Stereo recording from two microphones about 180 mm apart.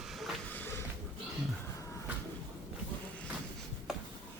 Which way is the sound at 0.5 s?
10° left (ahead or behind).